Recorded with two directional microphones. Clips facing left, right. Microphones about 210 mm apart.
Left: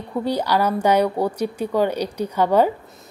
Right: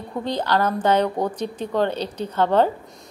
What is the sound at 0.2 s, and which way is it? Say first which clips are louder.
Speech: left 2 dB; 10° left (ahead or behind).